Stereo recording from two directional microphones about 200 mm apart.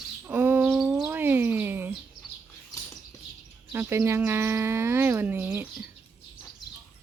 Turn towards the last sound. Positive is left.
turn(degrees=-10)  # may be behind; listen again after turning